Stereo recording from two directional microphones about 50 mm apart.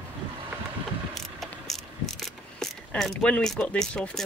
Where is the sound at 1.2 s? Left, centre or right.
Centre.